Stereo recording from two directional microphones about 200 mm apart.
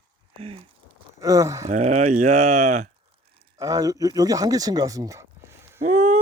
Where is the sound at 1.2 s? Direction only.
15° right (ahead or behind).